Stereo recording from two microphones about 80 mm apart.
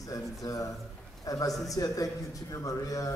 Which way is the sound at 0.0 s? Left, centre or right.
Left.